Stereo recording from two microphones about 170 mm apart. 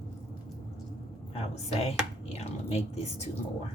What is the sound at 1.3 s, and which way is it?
Speech, 35° left (ahead or behind).